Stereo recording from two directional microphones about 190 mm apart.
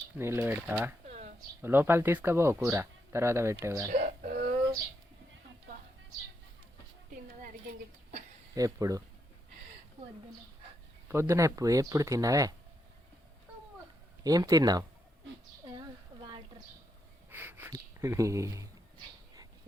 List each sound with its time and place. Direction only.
0.2 s speech: 15° right (ahead or behind)
3.9 s a sound: 40° right (ahead or behind)
8.5 s speech: 20° right (ahead or behind)
11.1 s speech: 15° right (ahead or behind)
14.3 s speech: 20° right (ahead or behind)
17.3 s a sound: 10° right (ahead or behind)